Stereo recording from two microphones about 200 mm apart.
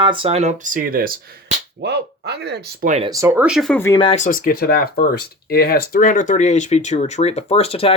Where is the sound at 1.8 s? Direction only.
55° right (ahead or behind).